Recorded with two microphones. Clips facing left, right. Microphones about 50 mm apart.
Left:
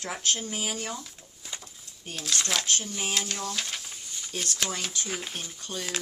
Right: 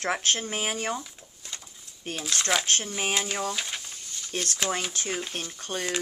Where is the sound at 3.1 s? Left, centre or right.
Centre.